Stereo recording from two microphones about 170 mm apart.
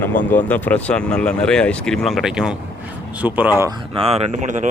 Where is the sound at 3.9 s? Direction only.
35° right (ahead or behind).